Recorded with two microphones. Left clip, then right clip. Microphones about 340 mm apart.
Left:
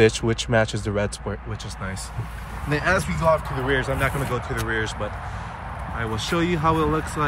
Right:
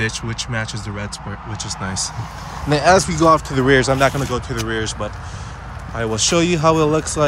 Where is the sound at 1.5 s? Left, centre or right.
Centre.